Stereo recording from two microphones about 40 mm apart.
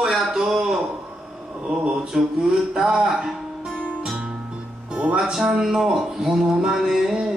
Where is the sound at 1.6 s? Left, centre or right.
Centre.